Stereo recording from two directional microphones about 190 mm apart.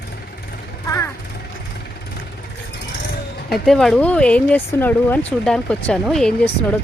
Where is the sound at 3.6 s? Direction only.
Centre (ahead or behind).